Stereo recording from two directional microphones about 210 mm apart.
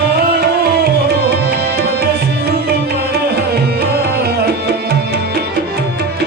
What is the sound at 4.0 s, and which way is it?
Tabla, 50° right (ahead or behind).